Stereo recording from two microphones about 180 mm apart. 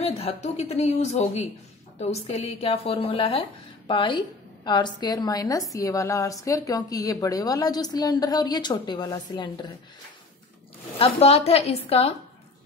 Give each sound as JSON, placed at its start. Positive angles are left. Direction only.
{"t": 0.0, "sound": "a woman's voice", "side_deg": 35}
{"t": 11.0, "sound": "a woman's voice", "side_deg": 30}